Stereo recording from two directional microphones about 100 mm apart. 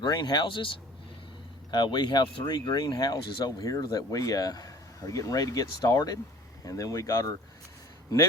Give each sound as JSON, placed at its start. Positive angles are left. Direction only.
{"t": 0.0, "sound": "speech", "side_deg": 45}
{"t": 1.7, "sound": "speech", "side_deg": 45}